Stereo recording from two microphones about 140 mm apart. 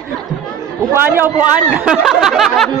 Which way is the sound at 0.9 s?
15° right (ahead or behind).